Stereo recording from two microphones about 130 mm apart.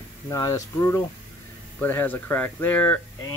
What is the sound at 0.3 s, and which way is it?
Speech, 25° left (ahead or behind).